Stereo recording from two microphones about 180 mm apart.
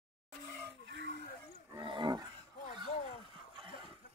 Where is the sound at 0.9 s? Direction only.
85° right.